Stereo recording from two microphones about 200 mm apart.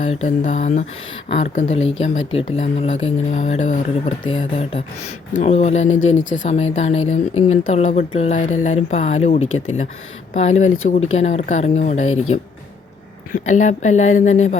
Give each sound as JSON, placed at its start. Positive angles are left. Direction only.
{"t": 0.1, "sound": "speech", "side_deg": 35}
{"t": 4.3, "sound": "speech", "side_deg": 30}
{"t": 5.9, "sound": "speech", "side_deg": 80}
{"t": 6.3, "sound": "speech", "side_deg": 35}
{"t": 12.0, "sound": "speech", "side_deg": 90}
{"t": 13.3, "sound": "speech", "side_deg": 40}